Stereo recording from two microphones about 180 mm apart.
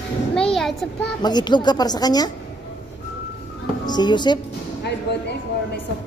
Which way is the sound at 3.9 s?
25° left (ahead or behind).